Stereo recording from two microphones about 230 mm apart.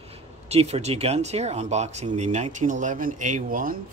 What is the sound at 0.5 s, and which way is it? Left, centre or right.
Speech, right.